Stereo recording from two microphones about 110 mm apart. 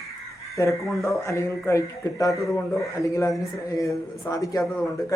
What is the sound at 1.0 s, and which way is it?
Speech, 30° left (ahead or behind).